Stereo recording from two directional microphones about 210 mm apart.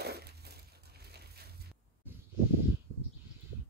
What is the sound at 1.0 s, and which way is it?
Crushing, 50° right (ahead or behind).